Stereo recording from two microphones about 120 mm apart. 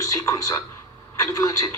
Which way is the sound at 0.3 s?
30° left (ahead or behind).